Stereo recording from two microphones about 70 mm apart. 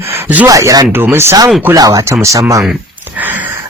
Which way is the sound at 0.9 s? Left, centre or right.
Right.